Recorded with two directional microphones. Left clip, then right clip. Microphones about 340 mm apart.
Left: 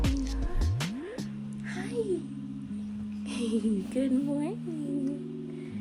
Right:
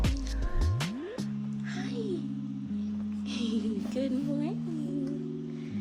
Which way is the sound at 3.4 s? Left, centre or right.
Centre.